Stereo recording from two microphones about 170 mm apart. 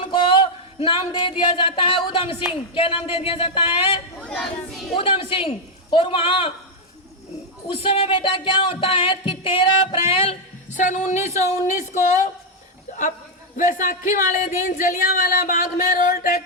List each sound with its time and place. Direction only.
0.1 s speech: 30° left (ahead or behind)
2.7 s music: 30° left (ahead or behind)
4.2 s speech: centre (ahead or behind)
4.9 s music: 30° left (ahead or behind)
7.7 s music: 30° left (ahead or behind)
11.4 s speech: 45° left (ahead or behind)
13.6 s speech: 50° left (ahead or behind)